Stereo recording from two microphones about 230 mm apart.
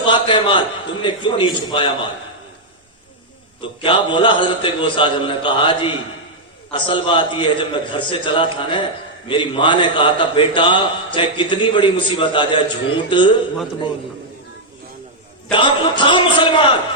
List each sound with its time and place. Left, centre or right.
0.0 s a sound: left
1.0 s a man's voice: left
3.6 s a man's voice: left
15.5 s a man's voice: left